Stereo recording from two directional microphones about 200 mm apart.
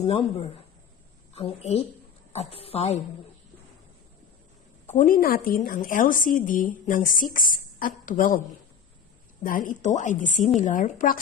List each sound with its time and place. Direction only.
1.3 s a woman's voice: 30° left (ahead or behind)
4.9 s a woman's voice: 45° left (ahead or behind)
9.4 s a woman's voice: 40° left (ahead or behind)